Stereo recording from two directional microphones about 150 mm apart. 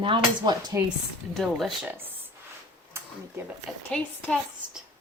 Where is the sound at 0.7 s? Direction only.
20° right (ahead or behind).